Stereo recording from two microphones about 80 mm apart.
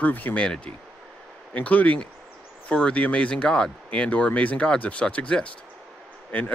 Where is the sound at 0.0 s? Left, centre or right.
Left.